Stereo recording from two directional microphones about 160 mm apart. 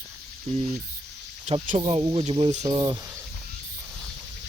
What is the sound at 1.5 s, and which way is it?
Speech, 40° right (ahead or behind).